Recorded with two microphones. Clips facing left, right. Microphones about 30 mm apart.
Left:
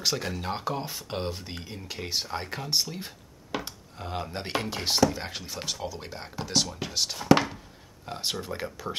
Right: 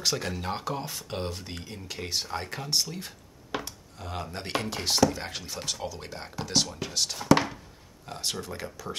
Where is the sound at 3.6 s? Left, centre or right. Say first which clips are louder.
Left 2 dB; centre.